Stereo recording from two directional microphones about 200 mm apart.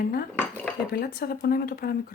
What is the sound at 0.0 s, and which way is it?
Speech, 50° left (ahead or behind).